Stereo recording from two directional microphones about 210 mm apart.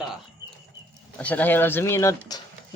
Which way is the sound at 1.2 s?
5° left (ahead or behind).